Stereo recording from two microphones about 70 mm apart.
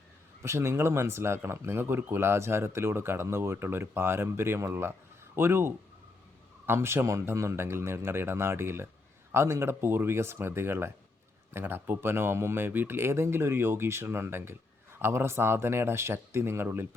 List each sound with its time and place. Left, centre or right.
0.4 s speech: right